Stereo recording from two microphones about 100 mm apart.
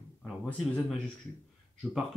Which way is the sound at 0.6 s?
5° left (ahead or behind).